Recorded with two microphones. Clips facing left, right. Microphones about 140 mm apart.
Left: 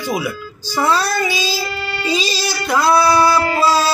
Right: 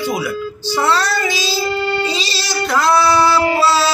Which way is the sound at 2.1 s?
10° left (ahead or behind).